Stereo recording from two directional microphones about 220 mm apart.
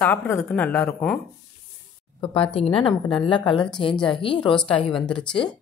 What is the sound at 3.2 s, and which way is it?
Speech, 20° left (ahead or behind).